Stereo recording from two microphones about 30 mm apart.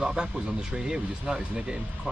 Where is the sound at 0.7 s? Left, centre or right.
Right.